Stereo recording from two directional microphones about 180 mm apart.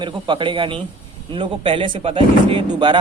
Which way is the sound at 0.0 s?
25° right (ahead or behind).